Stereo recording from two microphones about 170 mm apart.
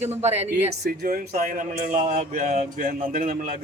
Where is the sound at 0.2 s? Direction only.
40° right (ahead or behind).